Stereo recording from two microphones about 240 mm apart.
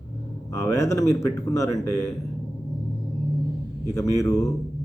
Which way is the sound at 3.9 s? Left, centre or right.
Centre.